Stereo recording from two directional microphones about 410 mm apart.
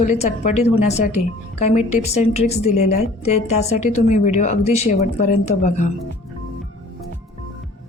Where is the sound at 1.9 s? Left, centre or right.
Centre.